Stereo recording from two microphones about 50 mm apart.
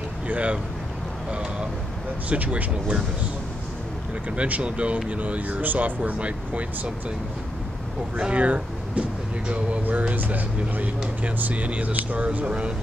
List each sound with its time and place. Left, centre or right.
0.3 s speech: right
2.2 s speech: right
4.4 s speech: right
8.2 s speech: right